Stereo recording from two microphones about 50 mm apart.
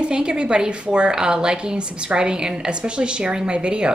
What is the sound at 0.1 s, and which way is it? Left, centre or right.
Speech, centre.